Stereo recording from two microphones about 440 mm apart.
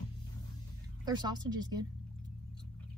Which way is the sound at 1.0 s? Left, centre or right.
Centre.